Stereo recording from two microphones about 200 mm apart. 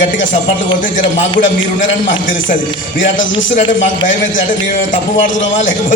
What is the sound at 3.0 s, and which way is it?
Speech, 40° left (ahead or behind).